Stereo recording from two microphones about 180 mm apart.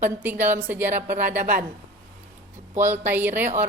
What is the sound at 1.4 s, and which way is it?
Speech, 50° right (ahead or behind).